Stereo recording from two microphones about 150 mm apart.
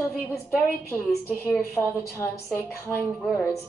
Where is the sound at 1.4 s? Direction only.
15° left (ahead or behind).